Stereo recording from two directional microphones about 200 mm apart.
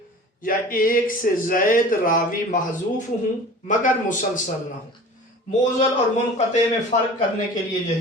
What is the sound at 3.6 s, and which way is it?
Speech, 40° left (ahead or behind).